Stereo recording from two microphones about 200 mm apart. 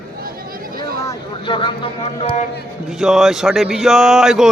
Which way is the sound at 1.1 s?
25° left (ahead or behind).